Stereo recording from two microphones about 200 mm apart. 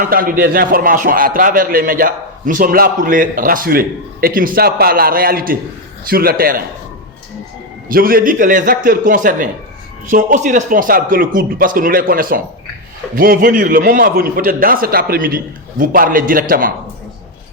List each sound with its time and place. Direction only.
0.0 s speech: 45° right (ahead or behind)
7.9 s speech: 45° right (ahead or behind)